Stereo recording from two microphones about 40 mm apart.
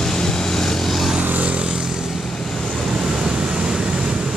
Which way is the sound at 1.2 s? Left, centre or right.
Right.